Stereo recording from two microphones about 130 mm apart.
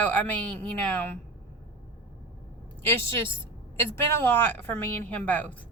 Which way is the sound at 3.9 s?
15° left (ahead or behind).